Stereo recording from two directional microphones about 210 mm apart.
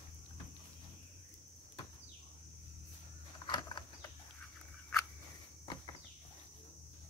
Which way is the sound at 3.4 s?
20° left (ahead or behind).